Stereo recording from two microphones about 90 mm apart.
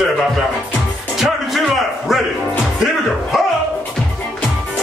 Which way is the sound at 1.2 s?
5° right (ahead or behind).